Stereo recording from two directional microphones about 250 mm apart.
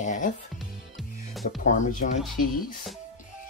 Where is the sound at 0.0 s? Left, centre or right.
Left.